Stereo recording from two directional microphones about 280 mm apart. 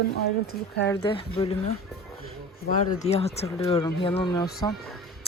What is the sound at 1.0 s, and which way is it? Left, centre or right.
Speech, centre.